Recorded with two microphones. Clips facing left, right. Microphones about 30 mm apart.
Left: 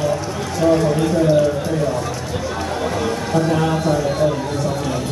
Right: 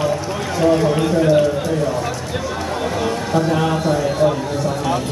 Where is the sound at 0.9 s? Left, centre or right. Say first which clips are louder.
Right 1 dB; centre.